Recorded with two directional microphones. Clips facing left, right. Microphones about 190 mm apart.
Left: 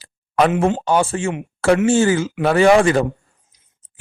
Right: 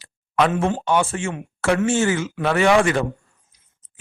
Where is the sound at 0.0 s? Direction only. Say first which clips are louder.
Left 3 dB; 35° left (ahead or behind).